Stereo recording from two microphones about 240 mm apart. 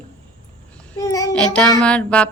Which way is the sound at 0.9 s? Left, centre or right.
Centre.